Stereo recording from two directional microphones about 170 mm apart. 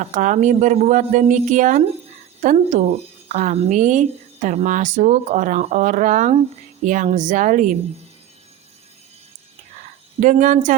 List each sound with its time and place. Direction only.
0.0 s a woman's voice: 50° right (ahead or behind)
10.2 s a woman's voice: 45° right (ahead or behind)